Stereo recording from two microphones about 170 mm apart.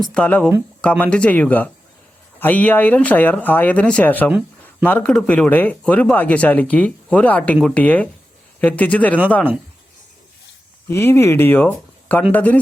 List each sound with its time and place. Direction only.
0.0 s speech: 5° left (ahead or behind)
10.8 s speech: 15° left (ahead or behind)